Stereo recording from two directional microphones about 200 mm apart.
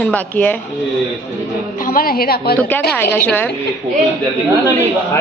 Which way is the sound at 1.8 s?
45° left (ahead or behind).